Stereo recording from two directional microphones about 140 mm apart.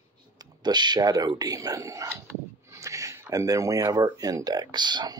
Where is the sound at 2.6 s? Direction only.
20° right (ahead or behind).